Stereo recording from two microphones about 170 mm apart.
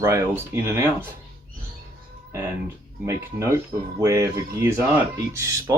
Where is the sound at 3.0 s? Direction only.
15° right (ahead or behind).